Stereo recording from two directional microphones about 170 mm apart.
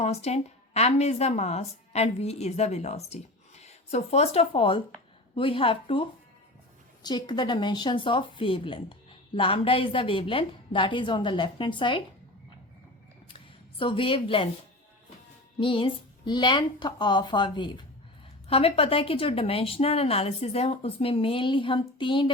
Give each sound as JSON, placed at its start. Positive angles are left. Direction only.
{"t": 0.0, "sound": "a woman's voice", "side_deg": 40}
{"t": 13.7, "sound": "a woman's voice", "side_deg": 30}
{"t": 15.5, "sound": "a woman's voice", "side_deg": 30}